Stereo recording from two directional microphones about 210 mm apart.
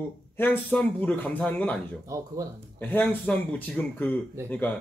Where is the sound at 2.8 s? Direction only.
10° left (ahead or behind).